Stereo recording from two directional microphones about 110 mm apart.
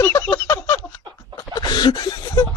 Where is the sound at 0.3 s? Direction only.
40° left (ahead or behind).